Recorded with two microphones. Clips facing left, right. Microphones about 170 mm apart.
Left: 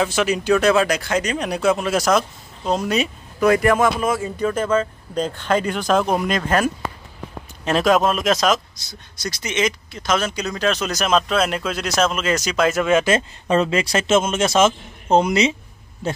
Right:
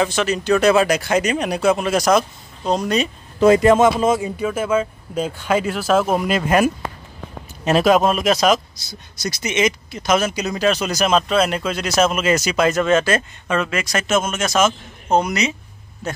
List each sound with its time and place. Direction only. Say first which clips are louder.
0.0 s speech: even; 10° left (ahead or behind)
0.6 s speech: right 2 dB; 5° right (ahead or behind)
3.3 s speech: right 4 dB; 25° right (ahead or behind)
4.4 s speech: even; 5° right (ahead or behind)
13.5 s a man's voice: left 3 dB; 30° left (ahead or behind)